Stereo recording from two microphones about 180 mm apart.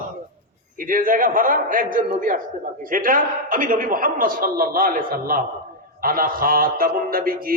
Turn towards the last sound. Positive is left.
turn(degrees=-55)  # may be behind; listen again after turning